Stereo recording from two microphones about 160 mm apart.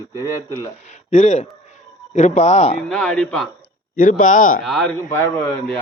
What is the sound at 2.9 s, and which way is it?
Speech, 5° left (ahead or behind).